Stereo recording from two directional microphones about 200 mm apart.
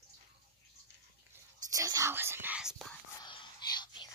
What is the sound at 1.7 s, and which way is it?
Whispering, 15° right (ahead or behind).